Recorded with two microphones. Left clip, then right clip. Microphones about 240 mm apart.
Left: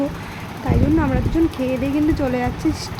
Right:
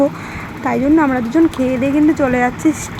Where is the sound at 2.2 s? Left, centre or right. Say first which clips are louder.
Right 7 dB; centre.